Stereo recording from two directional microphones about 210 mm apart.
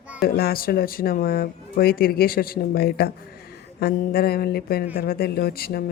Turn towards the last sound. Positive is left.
turn(degrees=45)  # may be behind; listen again after turning